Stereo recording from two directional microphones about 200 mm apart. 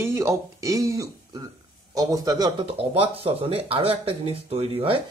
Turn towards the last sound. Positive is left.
turn(degrees=-25)  # may be behind; listen again after turning